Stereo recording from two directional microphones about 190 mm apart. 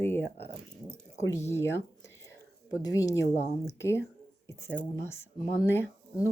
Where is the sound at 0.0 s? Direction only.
10° left (ahead or behind).